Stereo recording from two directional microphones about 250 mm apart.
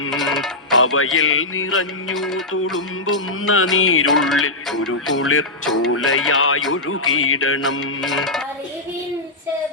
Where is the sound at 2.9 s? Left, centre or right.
Left.